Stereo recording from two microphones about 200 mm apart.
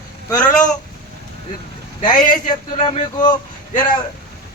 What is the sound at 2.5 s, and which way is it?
Speech, 20° left (ahead or behind).